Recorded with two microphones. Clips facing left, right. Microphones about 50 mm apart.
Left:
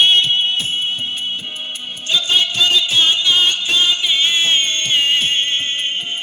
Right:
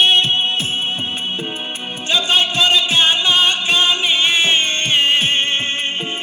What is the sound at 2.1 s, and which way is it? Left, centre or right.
Music, right.